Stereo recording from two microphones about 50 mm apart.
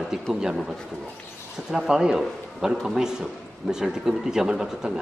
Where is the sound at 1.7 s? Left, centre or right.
Centre.